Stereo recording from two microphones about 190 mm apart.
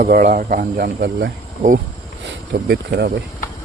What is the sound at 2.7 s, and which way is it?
Speech, 60° right (ahead or behind).